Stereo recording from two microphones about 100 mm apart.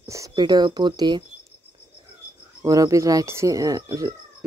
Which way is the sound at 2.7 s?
35° right (ahead or behind).